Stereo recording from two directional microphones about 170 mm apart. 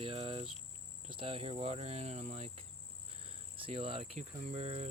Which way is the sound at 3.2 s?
35° right (ahead or behind).